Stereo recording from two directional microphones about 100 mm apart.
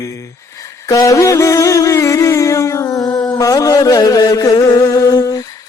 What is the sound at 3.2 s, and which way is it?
Mantra, 40° left (ahead or behind).